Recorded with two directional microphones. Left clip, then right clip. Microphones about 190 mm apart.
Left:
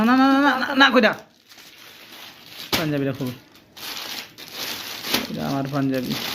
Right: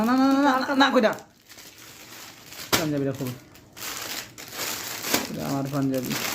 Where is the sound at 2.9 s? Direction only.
15° left (ahead or behind).